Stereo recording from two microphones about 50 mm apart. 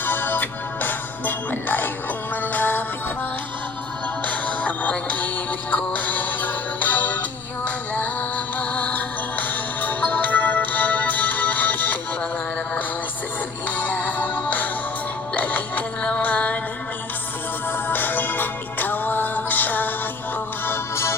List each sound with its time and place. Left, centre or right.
0.0 s music: left
4.3 s music: left
13.7 s music: left
17.7 s music: left
20.7 s music: left